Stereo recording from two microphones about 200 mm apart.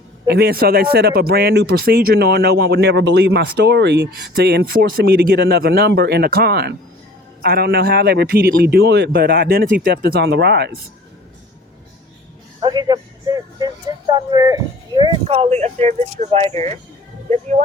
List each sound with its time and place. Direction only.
0.3 s speech: 55° right (ahead or behind)
12.5 s a sound: 20° right (ahead or behind)
14.1 s speech: 20° right (ahead or behind)